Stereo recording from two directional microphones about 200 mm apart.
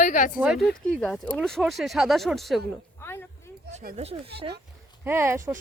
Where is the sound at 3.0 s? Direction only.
10° left (ahead or behind).